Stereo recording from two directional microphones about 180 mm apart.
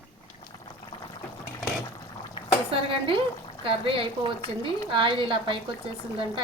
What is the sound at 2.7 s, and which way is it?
Speech, 30° right (ahead or behind).